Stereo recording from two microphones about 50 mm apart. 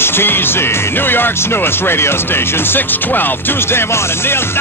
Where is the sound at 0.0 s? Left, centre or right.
Left.